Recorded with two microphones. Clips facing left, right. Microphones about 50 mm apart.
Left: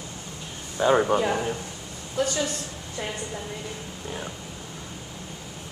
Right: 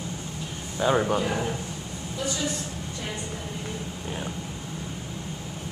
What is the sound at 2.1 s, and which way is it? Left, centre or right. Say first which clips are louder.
Speech: left 4 dB; left.